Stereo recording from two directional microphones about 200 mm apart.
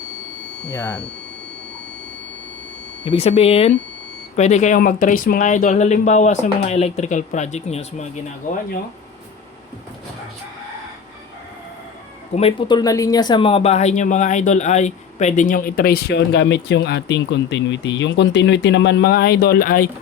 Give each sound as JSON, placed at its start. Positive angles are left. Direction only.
{"t": 0.7, "sound": "speech", "side_deg": 15}
{"t": 3.0, "sound": "speech", "side_deg": 30}
{"t": 12.3, "sound": "speech", "side_deg": 30}